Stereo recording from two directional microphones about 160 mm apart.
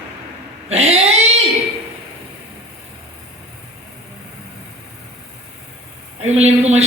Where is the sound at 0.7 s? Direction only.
40° right (ahead or behind).